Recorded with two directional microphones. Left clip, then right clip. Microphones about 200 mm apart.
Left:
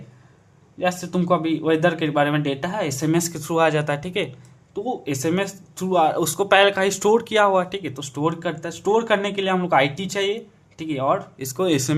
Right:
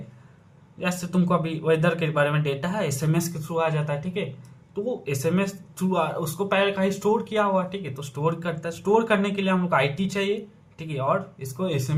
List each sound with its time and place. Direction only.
0.8 s speech: 25° left (ahead or behind); by 4.3 s 40° left (ahead or behind)
4.7 s speech: 25° left (ahead or behind)
11.5 s speech: 40° left (ahead or behind)